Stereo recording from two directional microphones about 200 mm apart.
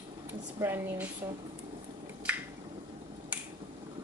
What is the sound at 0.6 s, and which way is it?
Speech, 10° right (ahead or behind).